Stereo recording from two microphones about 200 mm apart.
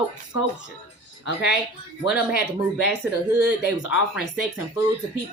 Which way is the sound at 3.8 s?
70° left (ahead or behind).